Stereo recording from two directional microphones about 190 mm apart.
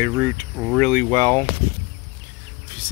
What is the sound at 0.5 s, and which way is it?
Speech, centre (ahead or behind).